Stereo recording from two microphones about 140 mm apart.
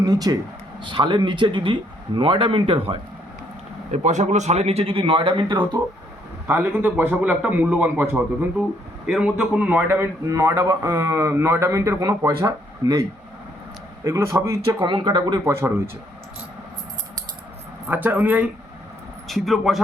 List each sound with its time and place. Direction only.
0.0 s a man's voice: 25° right (ahead or behind)
3.9 s speech: 55° right (ahead or behind); by 5.8 s 35° right (ahead or behind)
6.5 s a man's voice: 15° right (ahead or behind)
14.8 s speech: 35° right (ahead or behind)
15.4 s a man's voice: 20° right (ahead or behind)
17.8 s a man's voice: 10° right (ahead or behind)
19.3 s speech: centre (ahead or behind)